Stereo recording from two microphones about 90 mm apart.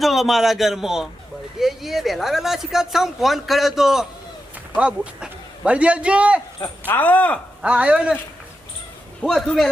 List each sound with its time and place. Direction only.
0.0 s a man's voice: centre (ahead or behind)
6.8 s speech: 20° left (ahead or behind)
7.6 s a man's voice: 10° right (ahead or behind)
9.2 s a man's voice: 20° left (ahead or behind)